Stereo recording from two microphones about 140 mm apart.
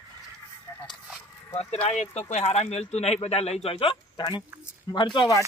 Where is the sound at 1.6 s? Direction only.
45° left (ahead or behind); by 5.0 s 25° left (ahead or behind).